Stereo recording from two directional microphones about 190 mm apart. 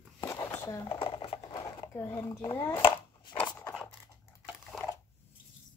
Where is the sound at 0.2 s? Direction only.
15° left (ahead or behind).